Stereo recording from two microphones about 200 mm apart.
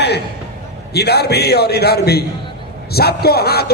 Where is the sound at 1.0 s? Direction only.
55° left (ahead or behind).